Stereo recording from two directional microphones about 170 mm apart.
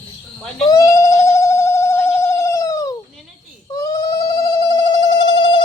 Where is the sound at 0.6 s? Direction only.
20° left (ahead or behind).